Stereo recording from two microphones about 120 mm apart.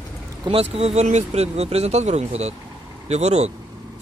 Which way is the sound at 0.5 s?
55° right (ahead or behind).